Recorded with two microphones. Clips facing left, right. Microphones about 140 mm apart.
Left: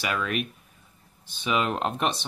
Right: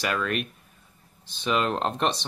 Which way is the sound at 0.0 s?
5° left (ahead or behind).